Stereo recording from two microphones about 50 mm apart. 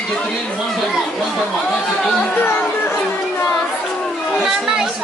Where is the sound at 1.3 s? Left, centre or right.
Centre.